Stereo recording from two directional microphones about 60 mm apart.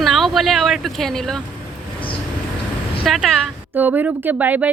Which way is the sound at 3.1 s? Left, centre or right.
Centre.